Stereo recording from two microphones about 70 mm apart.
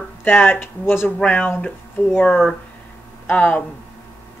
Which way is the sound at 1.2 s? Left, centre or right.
Centre.